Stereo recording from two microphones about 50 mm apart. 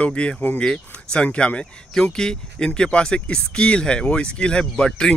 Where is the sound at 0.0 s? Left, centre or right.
Left.